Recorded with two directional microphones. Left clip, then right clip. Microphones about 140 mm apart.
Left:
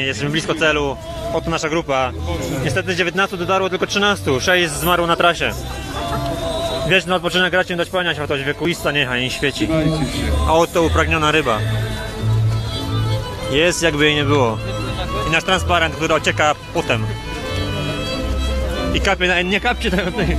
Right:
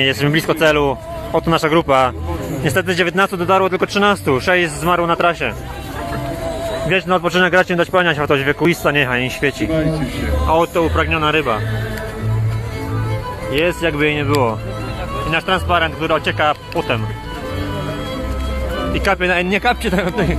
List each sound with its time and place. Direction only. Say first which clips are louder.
0.0 s speech: right 5 dB; 35° right (ahead or behind); by 5.5 s 5° right (ahead or behind)
7.1 s speech: right 3 dB; 20° right (ahead or behind)
9.7 s speech: even; 45° right (ahead or behind)
10.4 s speech: even; centre (ahead or behind)
13.5 s speech: left 1 dB; 5° left (ahead or behind)
18.9 s speech: right 1 dB; 15° right (ahead or behind)